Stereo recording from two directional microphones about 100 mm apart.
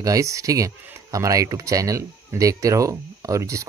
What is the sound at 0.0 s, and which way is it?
Speech, 35° right (ahead or behind).